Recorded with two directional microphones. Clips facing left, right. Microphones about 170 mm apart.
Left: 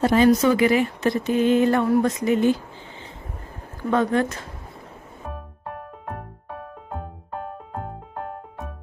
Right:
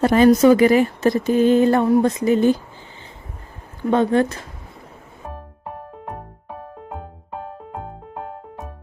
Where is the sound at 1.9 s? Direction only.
30° right (ahead or behind).